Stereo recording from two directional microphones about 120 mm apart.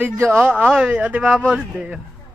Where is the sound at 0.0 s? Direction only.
15° right (ahead or behind).